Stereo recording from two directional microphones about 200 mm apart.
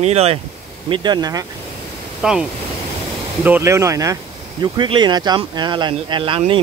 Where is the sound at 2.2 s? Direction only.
5° right (ahead or behind).